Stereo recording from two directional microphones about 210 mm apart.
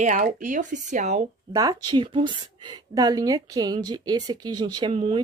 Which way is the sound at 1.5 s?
20° right (ahead or behind).